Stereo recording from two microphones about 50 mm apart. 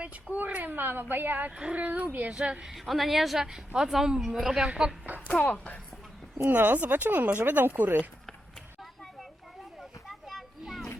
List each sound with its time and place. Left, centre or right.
0.0 s speech: right
2.6 s a woman's voice: centre
5.3 s speech: left
6.4 s speech: right
10.1 s children playing: centre